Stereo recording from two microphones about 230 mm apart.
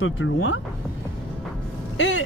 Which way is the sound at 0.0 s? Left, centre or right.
Left.